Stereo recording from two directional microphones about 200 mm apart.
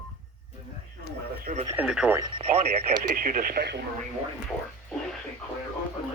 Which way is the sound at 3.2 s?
45° right (ahead or behind).